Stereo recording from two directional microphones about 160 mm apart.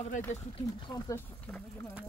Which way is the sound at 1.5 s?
10° left (ahead or behind).